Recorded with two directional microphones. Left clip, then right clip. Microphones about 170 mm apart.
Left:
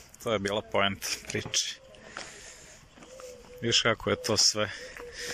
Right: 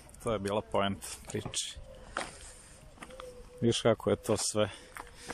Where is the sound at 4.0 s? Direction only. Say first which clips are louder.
Left 4 dB; 20° right (ahead or behind).